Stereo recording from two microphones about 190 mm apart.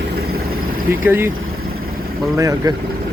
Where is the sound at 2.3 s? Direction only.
15° right (ahead or behind).